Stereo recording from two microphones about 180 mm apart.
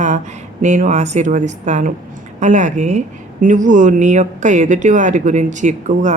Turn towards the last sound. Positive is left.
turn(degrees=-45)  # may be behind; listen again after turning